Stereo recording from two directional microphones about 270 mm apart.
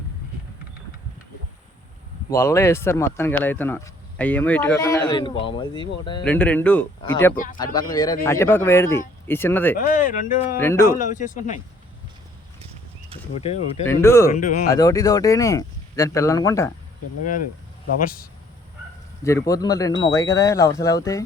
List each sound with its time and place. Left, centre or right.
2.3 s speech: centre
6.2 s speech: centre
9.7 s speech: left
10.6 s speech: centre
10.8 s speech: left
13.3 s speech: left
14.0 s speech: centre
14.3 s speech: left
14.7 s speech: centre
18.0 s speech: left
19.2 s speech: centre